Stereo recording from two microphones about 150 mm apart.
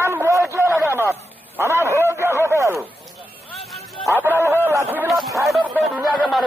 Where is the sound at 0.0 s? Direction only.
15° right (ahead or behind).